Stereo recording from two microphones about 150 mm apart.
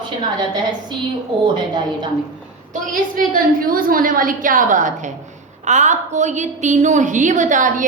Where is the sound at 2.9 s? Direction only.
65° right (ahead or behind).